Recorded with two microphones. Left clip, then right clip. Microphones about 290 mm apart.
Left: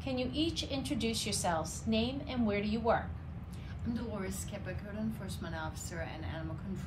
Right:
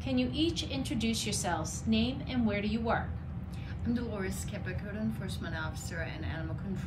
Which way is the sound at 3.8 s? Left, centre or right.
Centre.